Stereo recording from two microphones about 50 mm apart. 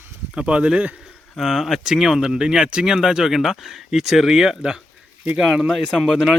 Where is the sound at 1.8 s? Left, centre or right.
Centre.